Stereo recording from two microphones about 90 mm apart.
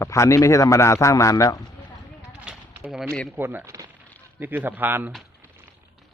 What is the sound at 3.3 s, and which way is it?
A man's voice, 20° right (ahead or behind).